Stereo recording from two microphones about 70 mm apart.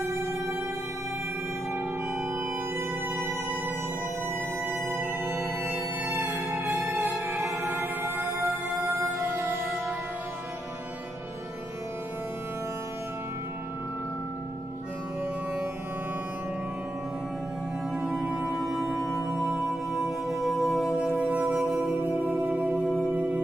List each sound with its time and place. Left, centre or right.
4.6 s music: right
17.9 s music: centre
21.3 s music: centre